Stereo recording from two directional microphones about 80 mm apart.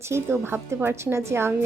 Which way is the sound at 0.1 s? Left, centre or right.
Right.